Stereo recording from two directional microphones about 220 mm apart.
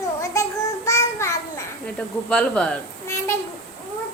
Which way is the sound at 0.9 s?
15° left (ahead or behind).